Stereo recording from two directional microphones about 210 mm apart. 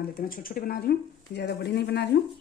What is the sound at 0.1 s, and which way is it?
Speech, 40° left (ahead or behind).